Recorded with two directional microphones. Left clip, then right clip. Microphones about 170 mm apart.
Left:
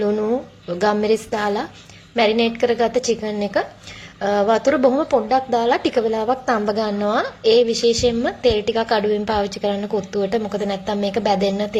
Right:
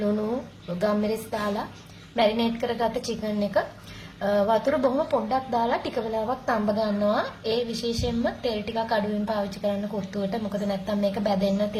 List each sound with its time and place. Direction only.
0.8 s a woman's voice: 25° left (ahead or behind)